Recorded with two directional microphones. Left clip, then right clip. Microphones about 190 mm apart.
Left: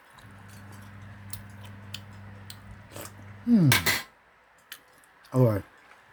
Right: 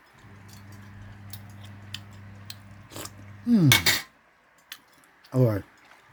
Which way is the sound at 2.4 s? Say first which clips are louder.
Right 2 dB; 20° right (ahead or behind).